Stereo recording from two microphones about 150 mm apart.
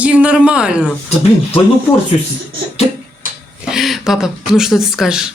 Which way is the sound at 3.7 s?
5° right (ahead or behind).